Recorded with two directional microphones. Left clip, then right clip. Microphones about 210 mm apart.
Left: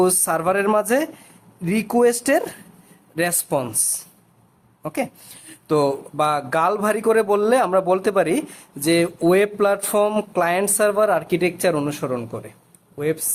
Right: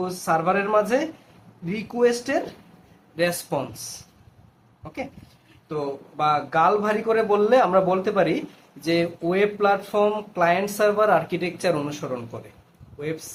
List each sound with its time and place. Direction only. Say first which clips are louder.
0.0 s speech: left 4 dB; 40° left (ahead or behind)
4.8 s a woman's voice: left 8 dB; 40° left (ahead or behind)